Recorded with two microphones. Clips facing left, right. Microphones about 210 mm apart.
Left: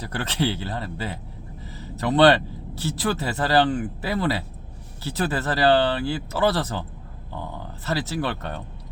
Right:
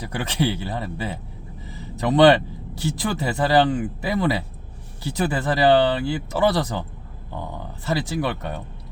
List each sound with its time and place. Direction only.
0.0 s speech: 15° right (ahead or behind)